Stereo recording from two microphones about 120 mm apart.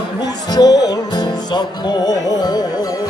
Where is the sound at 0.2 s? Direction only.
35° left (ahead or behind).